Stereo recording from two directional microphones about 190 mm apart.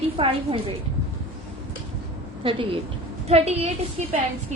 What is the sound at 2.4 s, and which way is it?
A woman's voice, 30° right (ahead or behind).